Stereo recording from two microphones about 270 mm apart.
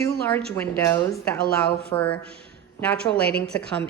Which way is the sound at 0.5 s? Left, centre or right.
Centre.